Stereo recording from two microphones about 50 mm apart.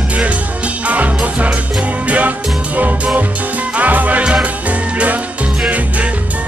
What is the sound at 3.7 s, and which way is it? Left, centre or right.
Music, right.